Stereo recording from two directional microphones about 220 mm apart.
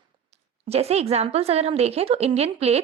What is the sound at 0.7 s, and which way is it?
A woman's voice, 30° right (ahead or behind).